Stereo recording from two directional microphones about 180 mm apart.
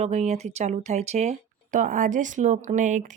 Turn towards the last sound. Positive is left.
turn(degrees=-45)  # may be behind; listen again after turning